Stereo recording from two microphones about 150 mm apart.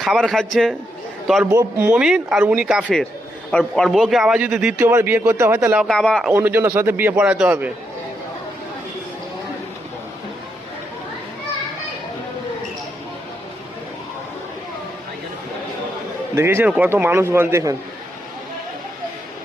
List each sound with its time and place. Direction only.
0.0 s speech: centre (ahead or behind)
1.5 s a man's voice: 20° right (ahead or behind)
2.0 s a man's voice: 5° right (ahead or behind)
5.8 s speech: 5° left (ahead or behind)
6.3 s a man's voice: 15° right (ahead or behind)
16.3 s a man's voice: 15° right (ahead or behind)